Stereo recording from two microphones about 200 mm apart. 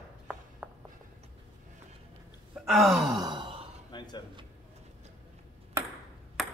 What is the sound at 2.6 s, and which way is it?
Gasp, centre (ahead or behind).